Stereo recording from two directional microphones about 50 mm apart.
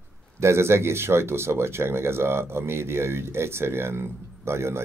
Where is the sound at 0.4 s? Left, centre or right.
Right.